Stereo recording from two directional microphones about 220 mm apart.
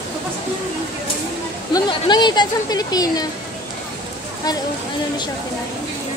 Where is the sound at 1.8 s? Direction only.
20° left (ahead or behind).